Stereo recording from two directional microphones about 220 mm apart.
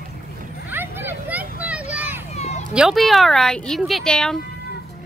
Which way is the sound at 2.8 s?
Centre (ahead or behind).